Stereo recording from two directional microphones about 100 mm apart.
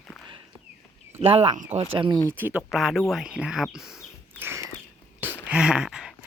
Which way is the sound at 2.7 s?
Centre (ahead or behind).